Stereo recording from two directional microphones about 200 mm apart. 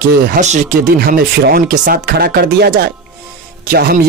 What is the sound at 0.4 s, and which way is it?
Speech, 40° right (ahead or behind).